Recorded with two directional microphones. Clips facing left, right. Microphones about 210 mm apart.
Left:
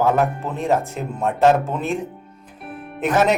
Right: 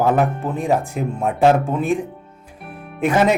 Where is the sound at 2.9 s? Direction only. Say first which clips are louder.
Right 2 dB; 10° right (ahead or behind).